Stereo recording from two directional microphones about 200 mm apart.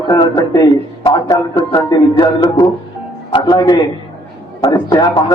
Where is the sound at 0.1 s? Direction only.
20° left (ahead or behind).